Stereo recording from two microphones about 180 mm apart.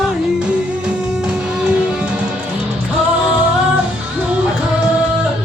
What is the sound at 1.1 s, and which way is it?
Music, 5° right (ahead or behind).